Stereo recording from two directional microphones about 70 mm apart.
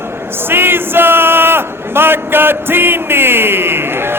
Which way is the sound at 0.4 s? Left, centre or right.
Right.